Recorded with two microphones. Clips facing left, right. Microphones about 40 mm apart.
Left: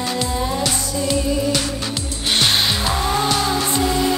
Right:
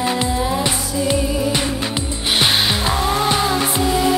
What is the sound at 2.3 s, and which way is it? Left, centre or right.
Music, centre.